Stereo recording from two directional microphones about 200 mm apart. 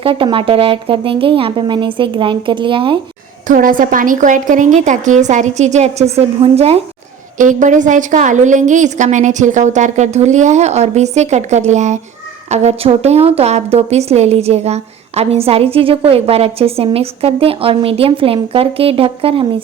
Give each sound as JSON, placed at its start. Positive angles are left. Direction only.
{"t": 0.0, "sound": "a woman's voice", "side_deg": -25}
{"t": 3.4, "sound": "a woman's voice", "side_deg": -45}